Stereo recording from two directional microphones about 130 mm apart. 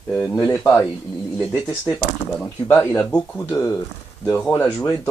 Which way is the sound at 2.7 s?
20° left (ahead or behind).